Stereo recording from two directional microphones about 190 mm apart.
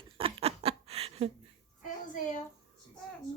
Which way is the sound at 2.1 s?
40° left (ahead or behind).